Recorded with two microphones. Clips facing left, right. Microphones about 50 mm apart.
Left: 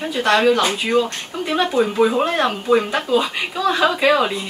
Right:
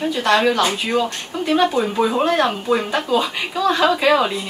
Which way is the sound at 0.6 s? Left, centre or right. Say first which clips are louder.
Even; left.